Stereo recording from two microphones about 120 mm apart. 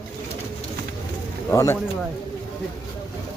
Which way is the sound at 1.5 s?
25° left (ahead or behind).